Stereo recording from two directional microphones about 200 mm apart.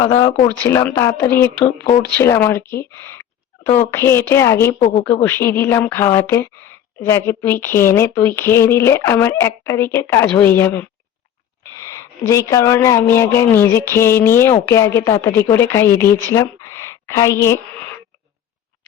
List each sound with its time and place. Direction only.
0.0 s a woman's voice: 15° left (ahead or behind)